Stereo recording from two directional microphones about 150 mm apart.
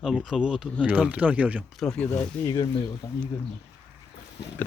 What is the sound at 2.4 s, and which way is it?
Speech, 20° left (ahead or behind).